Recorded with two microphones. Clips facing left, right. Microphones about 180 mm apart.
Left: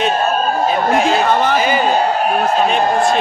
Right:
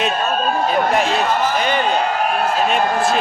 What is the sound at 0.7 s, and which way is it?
A man's voice, centre (ahead or behind).